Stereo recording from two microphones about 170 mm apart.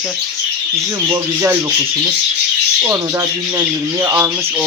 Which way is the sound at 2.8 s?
20° right (ahead or behind).